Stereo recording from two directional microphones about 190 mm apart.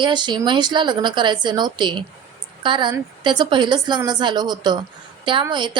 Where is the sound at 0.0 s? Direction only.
25° right (ahead or behind).